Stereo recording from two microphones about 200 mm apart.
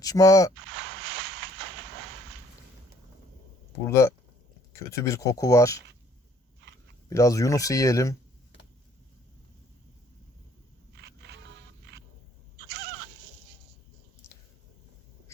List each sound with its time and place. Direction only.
0.0 s speech: 15° left (ahead or behind)
0.7 s a sound: 55° right (ahead or behind)
3.8 s speech: 15° left (ahead or behind)
7.1 s speech: 15° left (ahead or behind)
10.9 s scrape: 55° right (ahead or behind)